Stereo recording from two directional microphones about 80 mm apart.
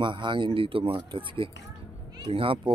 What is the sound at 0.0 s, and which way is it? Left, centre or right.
Speech, right.